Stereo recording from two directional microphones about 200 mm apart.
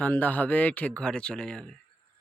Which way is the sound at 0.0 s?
10° left (ahead or behind).